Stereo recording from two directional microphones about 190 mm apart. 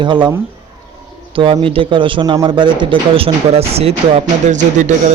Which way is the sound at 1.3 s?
25° right (ahead or behind).